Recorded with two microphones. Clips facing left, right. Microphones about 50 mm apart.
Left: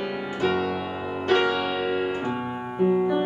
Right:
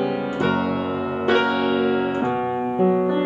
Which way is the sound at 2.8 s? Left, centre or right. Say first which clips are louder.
Right 1 dB; centre.